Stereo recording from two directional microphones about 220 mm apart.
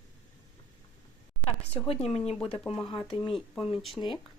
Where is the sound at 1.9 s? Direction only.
25° left (ahead or behind).